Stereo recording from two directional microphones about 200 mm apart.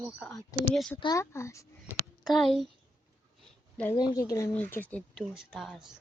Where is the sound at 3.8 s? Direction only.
15° left (ahead or behind); by 5.9 s centre (ahead or behind).